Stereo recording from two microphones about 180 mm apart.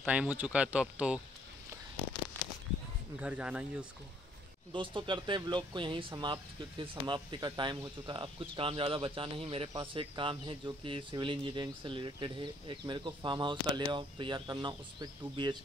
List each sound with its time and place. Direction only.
0.0 s speech: 10° right (ahead or behind)
3.2 s speech: 5° right (ahead or behind)
4.7 s speech: 25° right (ahead or behind)